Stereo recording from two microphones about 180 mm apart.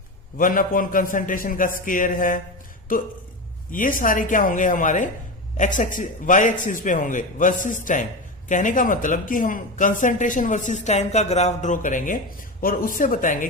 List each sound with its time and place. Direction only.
0.3 s speech: 50° left (ahead or behind)